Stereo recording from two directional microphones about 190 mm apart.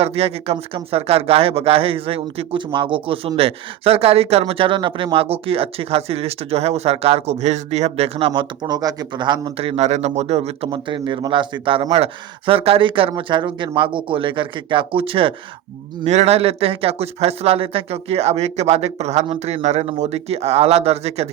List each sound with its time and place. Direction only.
0.0 s speech: 30° right (ahead or behind)